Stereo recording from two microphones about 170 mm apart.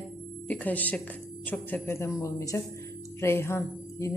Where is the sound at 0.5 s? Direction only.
10° left (ahead or behind).